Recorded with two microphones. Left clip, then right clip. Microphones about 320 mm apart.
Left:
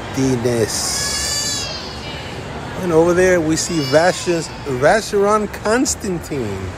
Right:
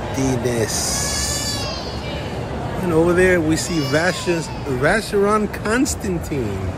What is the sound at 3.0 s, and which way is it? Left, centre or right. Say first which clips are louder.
Speech: left 2 dB; centre.